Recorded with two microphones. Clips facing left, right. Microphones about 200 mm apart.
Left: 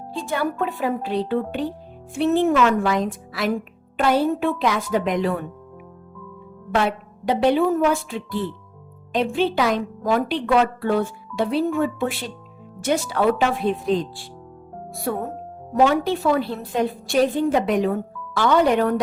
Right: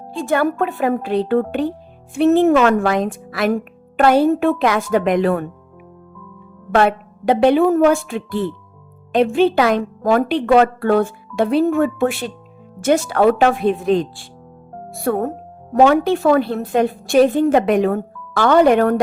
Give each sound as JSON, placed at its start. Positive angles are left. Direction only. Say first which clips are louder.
{"t": 0.3, "sound": "speech", "louder": "right 6 dB", "side_deg": -60}
{"t": 6.7, "sound": "speech", "louder": "right 6 dB", "side_deg": -55}
{"t": 15.0, "sound": "speech", "louder": "right 7 dB", "side_deg": -70}
{"t": 15.7, "sound": "speech", "louder": "right 5 dB", "side_deg": -55}
{"t": 17.5, "sound": "speech", "louder": "right 5 dB", "side_deg": -60}